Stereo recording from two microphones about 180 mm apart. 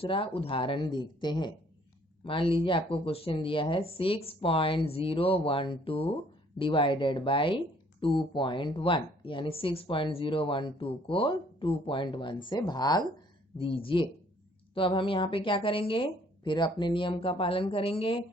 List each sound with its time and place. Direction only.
0.0 s speech: 30° left (ahead or behind)